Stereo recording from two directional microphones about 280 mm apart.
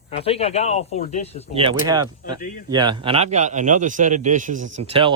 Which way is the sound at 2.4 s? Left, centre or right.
Left.